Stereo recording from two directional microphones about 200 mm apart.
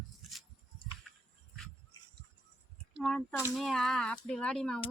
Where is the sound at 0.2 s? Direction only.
Centre (ahead or behind).